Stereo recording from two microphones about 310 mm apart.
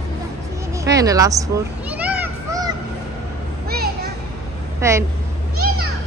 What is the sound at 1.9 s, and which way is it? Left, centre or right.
Children playing, centre.